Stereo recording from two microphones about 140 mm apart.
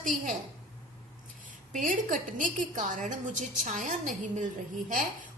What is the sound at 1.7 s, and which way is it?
A woman's voice, 70° right (ahead or behind).